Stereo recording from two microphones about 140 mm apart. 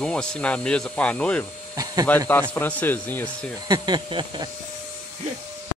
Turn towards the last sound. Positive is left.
turn(degrees=-35)  # may be behind; listen again after turning